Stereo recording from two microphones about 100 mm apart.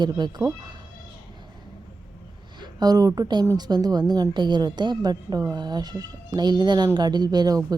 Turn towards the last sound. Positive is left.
turn(degrees=-40)  # may be behind; listen again after turning